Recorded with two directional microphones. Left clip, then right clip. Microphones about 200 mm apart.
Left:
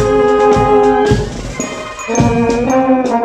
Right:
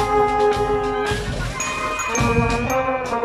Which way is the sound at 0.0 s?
35° left (ahead or behind).